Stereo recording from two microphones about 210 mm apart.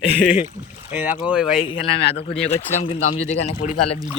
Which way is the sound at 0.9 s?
10° right (ahead or behind).